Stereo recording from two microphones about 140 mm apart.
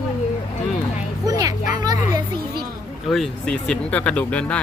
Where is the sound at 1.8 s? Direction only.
30° right (ahead or behind).